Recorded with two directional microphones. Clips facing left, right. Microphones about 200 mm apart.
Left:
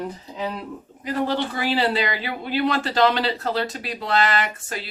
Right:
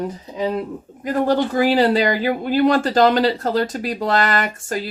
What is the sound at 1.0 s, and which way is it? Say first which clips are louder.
Speech: right 6 dB; 45° right (ahead or behind).